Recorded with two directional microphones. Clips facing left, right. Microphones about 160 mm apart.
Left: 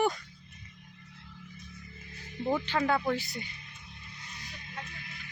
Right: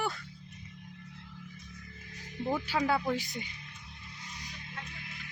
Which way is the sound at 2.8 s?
10° right (ahead or behind).